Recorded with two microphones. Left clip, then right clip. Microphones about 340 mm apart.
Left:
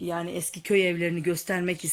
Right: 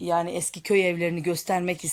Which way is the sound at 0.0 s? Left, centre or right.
Centre.